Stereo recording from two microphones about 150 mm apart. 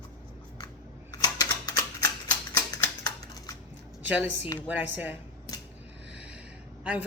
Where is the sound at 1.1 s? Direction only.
25° left (ahead or behind).